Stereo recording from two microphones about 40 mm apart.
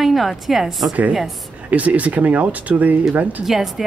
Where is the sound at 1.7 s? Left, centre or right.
Right.